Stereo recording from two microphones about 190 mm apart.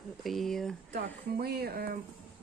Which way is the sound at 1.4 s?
55° right (ahead or behind).